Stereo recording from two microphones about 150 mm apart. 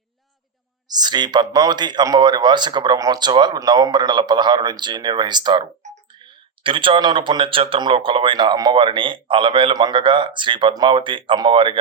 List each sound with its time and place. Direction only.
0.9 s speech: 25° right (ahead or behind)